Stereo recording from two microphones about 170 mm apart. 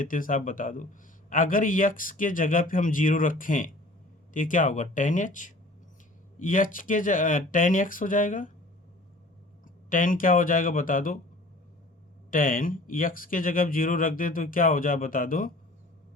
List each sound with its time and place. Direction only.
0.0 s speech: 50° left (ahead or behind)
9.9 s speech: 55° left (ahead or behind)
12.3 s speech: 55° left (ahead or behind)